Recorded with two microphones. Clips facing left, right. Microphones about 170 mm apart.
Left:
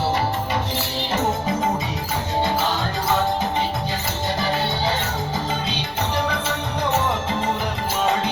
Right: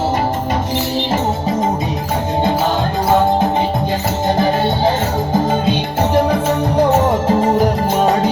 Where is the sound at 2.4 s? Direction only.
50° right (ahead or behind).